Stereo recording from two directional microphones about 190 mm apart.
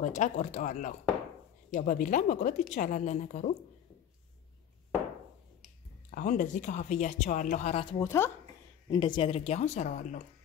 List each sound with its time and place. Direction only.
0.0 s speech: 40° left (ahead or behind)
6.1 s speech: 45° left (ahead or behind)
8.0 s speech: 15° left (ahead or behind)
8.9 s speech: 25° left (ahead or behind)